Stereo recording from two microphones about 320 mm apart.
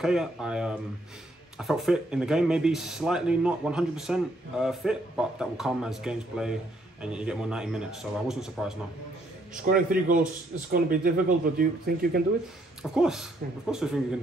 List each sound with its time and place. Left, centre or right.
0.0 s speech: centre
9.7 s speech: right
12.9 s speech: centre